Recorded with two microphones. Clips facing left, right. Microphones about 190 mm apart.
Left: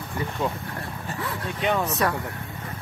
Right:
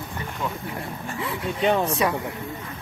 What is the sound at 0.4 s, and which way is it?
Speech, 30° left (ahead or behind).